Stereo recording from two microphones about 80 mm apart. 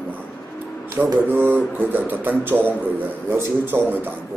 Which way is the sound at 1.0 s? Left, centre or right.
Centre.